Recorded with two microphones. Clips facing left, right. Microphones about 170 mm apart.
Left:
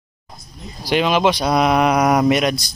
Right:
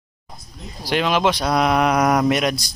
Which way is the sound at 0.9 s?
5° left (ahead or behind).